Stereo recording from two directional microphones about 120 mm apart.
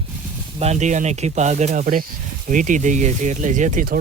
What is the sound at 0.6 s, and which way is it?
Speech, 70° right (ahead or behind).